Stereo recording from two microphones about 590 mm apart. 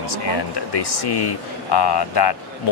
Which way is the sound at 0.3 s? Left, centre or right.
Left.